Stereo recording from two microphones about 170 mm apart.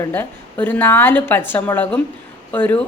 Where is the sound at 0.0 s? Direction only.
10° left (ahead or behind).